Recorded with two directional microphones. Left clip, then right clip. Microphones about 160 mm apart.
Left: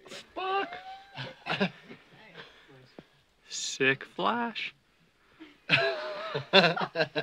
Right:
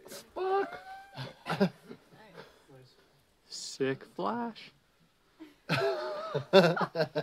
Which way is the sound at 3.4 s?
10° right (ahead or behind).